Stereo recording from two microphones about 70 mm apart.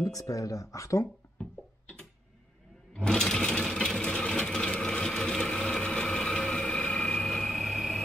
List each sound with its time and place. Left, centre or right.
0.0 s speech: left
1.4 s a sound: centre
2.9 s vehicle: centre